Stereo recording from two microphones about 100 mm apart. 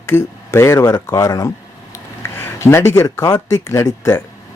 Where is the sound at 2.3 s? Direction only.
25° left (ahead or behind).